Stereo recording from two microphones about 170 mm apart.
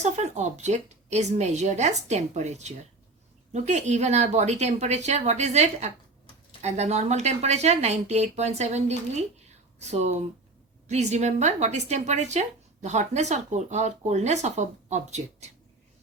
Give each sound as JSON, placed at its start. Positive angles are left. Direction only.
{"t": 0.0, "sound": "a woman's voice", "side_deg": -40}